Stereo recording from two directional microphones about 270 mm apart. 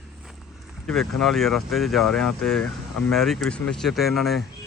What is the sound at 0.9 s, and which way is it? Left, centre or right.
A man's voice, centre.